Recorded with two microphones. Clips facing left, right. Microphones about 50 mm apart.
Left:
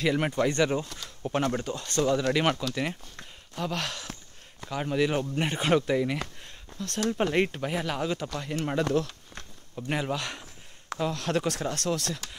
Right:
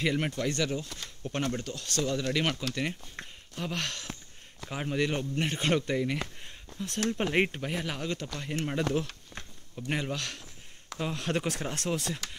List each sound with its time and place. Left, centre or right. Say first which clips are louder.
0.0 s speech: left 3 dB; centre
0.3 s speech: left 6 dB; left
1.2 s speech: left 6 dB; centre
1.6 s speech: left 5 dB; left
2.7 s speech: left 2 dB; centre
3.2 s a sound: right 3 dB; right
3.5 s speech: left 3 dB; centre
7.3 s speech: left 1 dB; centre
7.6 s speech: left 4 dB; centre
11.0 s speech: left 3 dB; centre
11.7 s speech: left 3 dB; right
12.0 s speech: left 1 dB; centre